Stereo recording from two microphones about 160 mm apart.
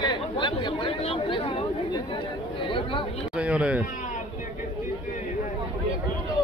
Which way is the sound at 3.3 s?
5° right (ahead or behind).